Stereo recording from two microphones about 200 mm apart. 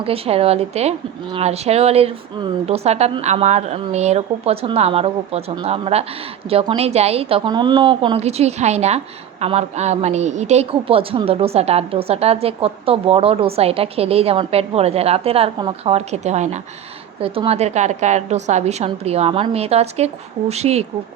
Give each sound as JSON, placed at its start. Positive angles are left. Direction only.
{"t": 0.0, "sound": "a woman's voice", "side_deg": -30}